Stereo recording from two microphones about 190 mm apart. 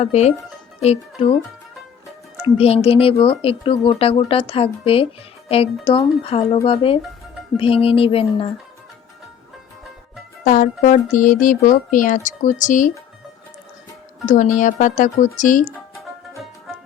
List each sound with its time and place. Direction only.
0.0 s speech: 35° left (ahead or behind)
2.4 s speech: 30° left (ahead or behind)
10.4 s speech: 45° left (ahead or behind)
14.3 s speech: 40° left (ahead or behind)